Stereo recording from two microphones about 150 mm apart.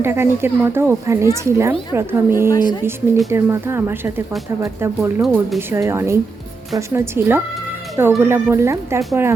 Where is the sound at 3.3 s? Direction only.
15° right (ahead or behind).